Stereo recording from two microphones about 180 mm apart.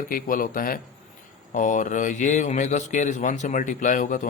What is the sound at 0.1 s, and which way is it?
A man's voice, 50° left (ahead or behind).